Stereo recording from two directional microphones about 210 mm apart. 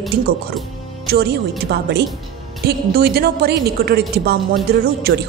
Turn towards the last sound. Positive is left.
turn(degrees=-50)  # may be behind; listen again after turning